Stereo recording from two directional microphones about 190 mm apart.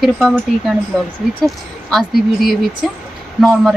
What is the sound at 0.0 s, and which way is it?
A woman's voice, 5° right (ahead or behind).